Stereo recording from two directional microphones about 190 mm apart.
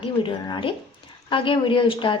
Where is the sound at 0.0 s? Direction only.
25° left (ahead or behind).